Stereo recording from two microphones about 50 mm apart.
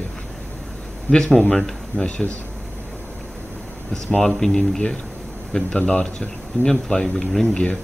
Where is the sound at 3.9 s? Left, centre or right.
Centre.